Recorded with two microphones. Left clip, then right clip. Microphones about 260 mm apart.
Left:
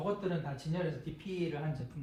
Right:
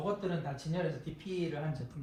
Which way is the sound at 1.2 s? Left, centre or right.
Left.